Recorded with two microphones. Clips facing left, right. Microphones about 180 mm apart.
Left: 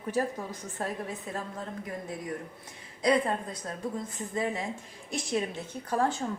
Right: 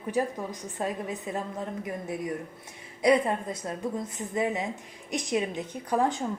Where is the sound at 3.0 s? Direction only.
20° right (ahead or behind).